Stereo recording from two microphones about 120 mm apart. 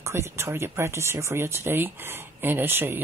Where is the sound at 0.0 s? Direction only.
25° right (ahead or behind).